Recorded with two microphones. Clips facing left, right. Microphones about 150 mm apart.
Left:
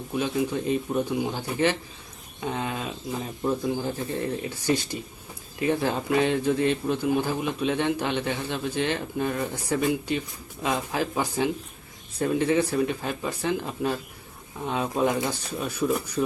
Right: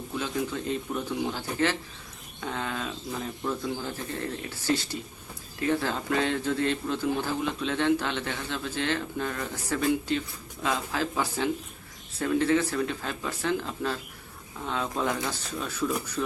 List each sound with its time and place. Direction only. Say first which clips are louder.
0.2 s a man's voice: left 5 dB; 15° left (ahead or behind)